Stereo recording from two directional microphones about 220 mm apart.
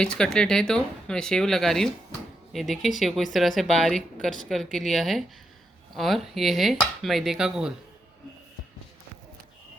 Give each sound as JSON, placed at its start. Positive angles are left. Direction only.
{"t": 0.0, "sound": "speech", "side_deg": 5}